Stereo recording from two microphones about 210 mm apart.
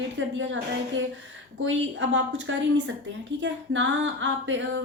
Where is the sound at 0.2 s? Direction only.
65° right (ahead or behind).